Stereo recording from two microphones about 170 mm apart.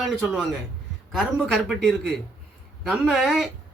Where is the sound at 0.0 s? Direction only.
Centre (ahead or behind).